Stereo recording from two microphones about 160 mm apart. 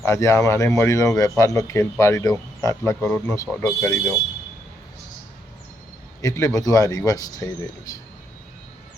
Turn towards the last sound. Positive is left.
turn(degrees=25)  # may be behind; listen again after turning